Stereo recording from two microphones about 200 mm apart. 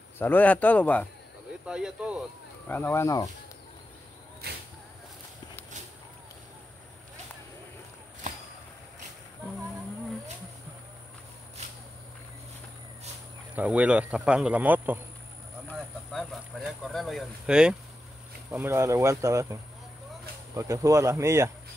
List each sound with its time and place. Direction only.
0.2 s a man's voice: 10° left (ahead or behind)
1.7 s speech: 5° right (ahead or behind)
2.7 s a man's voice: 10° left (ahead or behind)
4.4 s a sound: 55° right (ahead or behind)
13.6 s speech: 5° right (ahead or behind)
16.1 s speech: centre (ahead or behind)